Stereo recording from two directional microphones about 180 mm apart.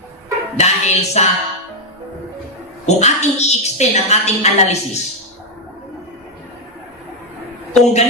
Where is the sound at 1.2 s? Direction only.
40° left (ahead or behind).